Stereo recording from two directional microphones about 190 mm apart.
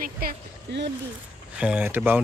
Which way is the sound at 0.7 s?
60° right (ahead or behind).